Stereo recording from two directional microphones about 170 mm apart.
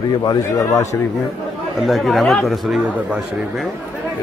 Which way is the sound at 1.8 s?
Centre (ahead or behind).